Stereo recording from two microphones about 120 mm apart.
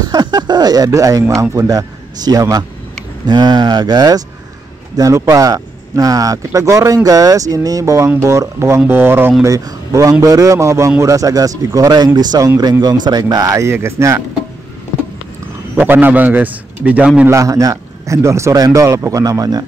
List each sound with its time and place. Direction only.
0.0 s a sound: 35° right (ahead or behind)
1.3 s speech: 25° right (ahead or behind)
15.8 s a man's voice: 15° right (ahead or behind)
17.3 s speech: 25° right (ahead or behind)